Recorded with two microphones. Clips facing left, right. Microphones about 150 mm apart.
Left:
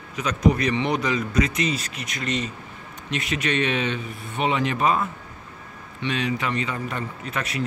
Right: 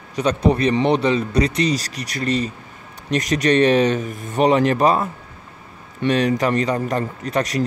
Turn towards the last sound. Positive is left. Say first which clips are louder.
# right 8 dB
turn(degrees=-40)  # may be behind; listen again after turning